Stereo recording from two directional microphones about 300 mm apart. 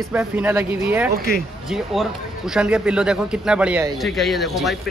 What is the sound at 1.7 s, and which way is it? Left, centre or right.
A man's voice, centre.